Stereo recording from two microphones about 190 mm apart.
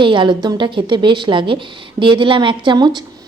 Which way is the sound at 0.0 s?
25° right (ahead or behind).